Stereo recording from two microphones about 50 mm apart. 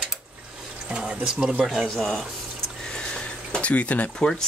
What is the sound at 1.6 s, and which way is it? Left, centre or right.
Speech, centre.